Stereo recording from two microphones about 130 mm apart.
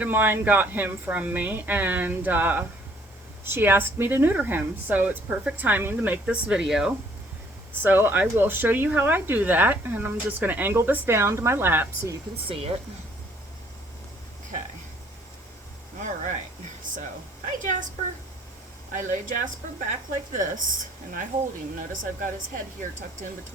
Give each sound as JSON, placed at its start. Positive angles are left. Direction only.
{"t": 0.0, "sound": "speech", "side_deg": -15}
{"t": 7.8, "sound": "speech", "side_deg": -15}
{"t": 12.5, "sound": "speech", "side_deg": -50}
{"t": 16.9, "sound": "a sound", "side_deg": -90}
{"t": 17.4, "sound": "a woman's voice", "side_deg": -80}
{"t": 18.9, "sound": "speech", "side_deg": -75}
{"t": 21.8, "sound": "speech", "side_deg": -90}